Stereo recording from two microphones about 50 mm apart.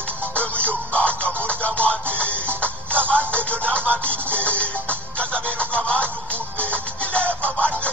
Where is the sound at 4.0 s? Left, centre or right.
Right.